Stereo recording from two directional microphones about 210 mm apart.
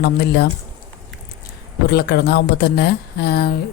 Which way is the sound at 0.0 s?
50° left (ahead or behind).